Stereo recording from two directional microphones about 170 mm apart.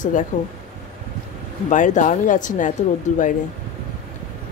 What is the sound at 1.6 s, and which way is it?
Speech, 45° left (ahead or behind).